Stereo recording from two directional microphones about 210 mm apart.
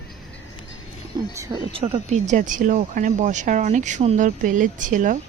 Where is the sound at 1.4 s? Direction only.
20° right (ahead or behind).